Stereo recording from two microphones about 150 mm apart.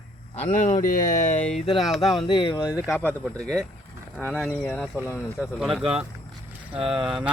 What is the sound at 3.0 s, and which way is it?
Speech, 10° left (ahead or behind).